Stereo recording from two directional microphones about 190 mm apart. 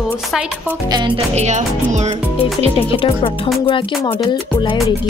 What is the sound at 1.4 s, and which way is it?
Speech, 40° right (ahead or behind).